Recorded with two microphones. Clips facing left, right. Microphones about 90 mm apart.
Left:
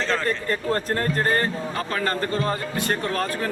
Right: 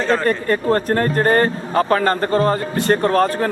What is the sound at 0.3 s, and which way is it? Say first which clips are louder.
A man's voice: right 7 dB; 50° right (ahead or behind).